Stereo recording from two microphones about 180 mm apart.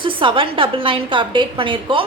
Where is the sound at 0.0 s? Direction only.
30° right (ahead or behind).